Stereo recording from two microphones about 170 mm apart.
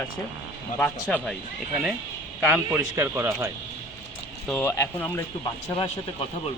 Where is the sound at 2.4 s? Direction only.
10° right (ahead or behind).